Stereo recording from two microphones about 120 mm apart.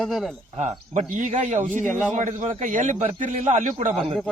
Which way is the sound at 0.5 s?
70° right (ahead or behind).